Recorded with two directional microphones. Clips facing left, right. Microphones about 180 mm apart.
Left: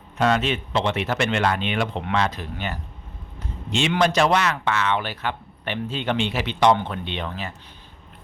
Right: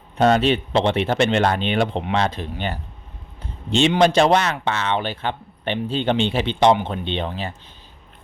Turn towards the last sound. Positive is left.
turn(degrees=-30)  # may be behind; listen again after turning